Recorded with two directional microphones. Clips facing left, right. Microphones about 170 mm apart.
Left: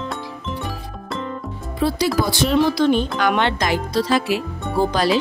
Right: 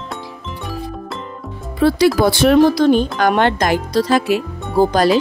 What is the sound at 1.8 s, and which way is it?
Speech, 65° right (ahead or behind).